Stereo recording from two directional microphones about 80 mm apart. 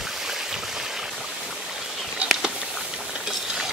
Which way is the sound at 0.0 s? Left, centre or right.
Centre.